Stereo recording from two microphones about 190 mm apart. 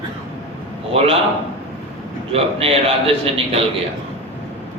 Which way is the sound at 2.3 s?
30° right (ahead or behind).